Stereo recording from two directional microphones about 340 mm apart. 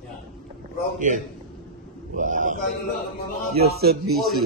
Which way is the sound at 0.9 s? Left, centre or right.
Right.